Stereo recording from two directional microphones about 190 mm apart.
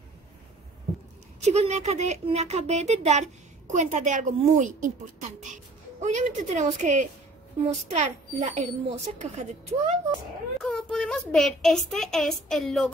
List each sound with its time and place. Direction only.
1.4 s speech: 35° right (ahead or behind)
5.9 s speech: 40° right (ahead or behind)
10.6 s a woman's voice: centre (ahead or behind)